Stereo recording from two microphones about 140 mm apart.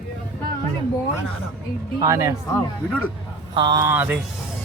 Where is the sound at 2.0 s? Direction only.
25° right (ahead or behind).